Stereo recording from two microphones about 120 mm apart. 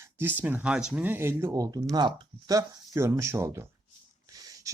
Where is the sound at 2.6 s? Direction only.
25° right (ahead or behind).